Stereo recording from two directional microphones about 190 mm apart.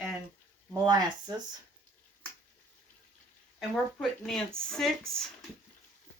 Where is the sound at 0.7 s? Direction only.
20° right (ahead or behind).